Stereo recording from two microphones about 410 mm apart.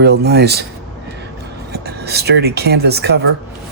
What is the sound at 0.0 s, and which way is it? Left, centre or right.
Speech, right.